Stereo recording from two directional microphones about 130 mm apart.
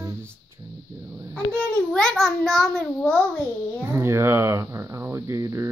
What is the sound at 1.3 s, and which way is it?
A child's voice, 10° left (ahead or behind).